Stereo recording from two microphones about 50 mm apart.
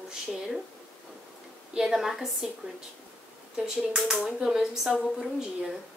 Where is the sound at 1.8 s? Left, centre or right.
Centre.